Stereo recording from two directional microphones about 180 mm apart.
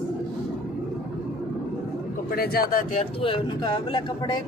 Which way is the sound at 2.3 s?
60° left (ahead or behind).